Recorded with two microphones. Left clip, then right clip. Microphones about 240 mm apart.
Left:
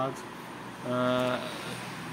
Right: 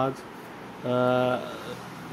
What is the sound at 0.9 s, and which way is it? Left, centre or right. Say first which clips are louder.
Speech: right 5 dB; centre.